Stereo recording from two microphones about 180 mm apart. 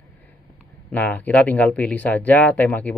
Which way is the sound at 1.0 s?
10° left (ahead or behind).